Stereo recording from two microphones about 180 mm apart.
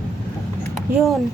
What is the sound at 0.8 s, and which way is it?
Speech, centre (ahead or behind).